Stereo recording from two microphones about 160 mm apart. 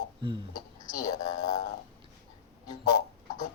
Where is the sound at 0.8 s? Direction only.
25° left (ahead or behind).